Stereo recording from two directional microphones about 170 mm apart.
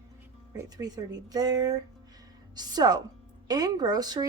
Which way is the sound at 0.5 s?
25° right (ahead or behind).